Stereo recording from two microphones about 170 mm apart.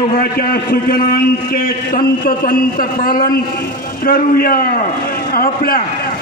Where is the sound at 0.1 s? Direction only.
60° left (ahead or behind).